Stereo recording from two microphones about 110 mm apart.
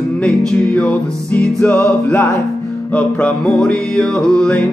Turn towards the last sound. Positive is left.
turn(degrees=10)  # may be behind; listen again after turning